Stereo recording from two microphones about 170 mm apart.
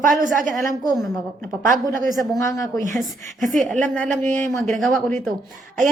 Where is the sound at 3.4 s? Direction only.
50° right (ahead or behind).